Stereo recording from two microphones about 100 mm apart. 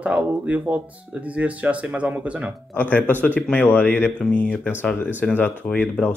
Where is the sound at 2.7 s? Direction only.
15° left (ahead or behind).